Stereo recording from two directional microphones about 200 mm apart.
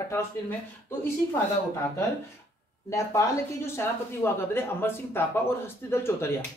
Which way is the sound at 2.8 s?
15° left (ahead or behind).